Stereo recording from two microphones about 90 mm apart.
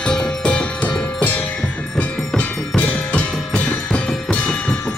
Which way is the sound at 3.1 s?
15° left (ahead or behind).